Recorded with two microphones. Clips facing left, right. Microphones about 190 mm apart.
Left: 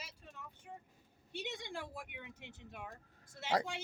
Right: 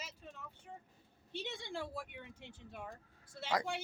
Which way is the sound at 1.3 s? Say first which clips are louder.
Right 1 dB; 15° left (ahead or behind).